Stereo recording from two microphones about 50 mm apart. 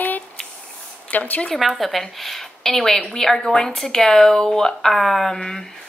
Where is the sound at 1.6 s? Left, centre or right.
Centre.